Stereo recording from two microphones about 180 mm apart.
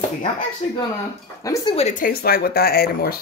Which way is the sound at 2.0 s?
55° left (ahead or behind).